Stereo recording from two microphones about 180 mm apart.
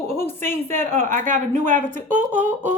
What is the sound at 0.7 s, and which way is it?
Speech, 40° right (ahead or behind).